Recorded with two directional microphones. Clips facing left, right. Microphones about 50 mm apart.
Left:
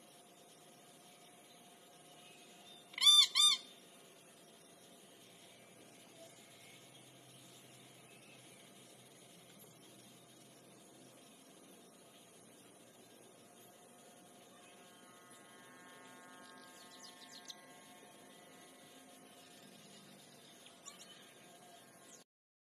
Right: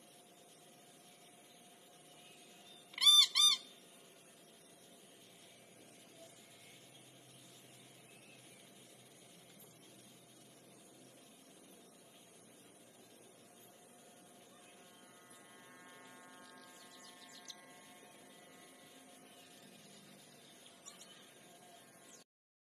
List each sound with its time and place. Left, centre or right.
2.9 s squeak: centre
15.5 s electric toothbrush: centre
17.0 s bird: centre